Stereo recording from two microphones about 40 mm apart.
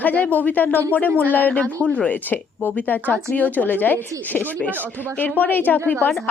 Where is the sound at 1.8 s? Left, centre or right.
Left.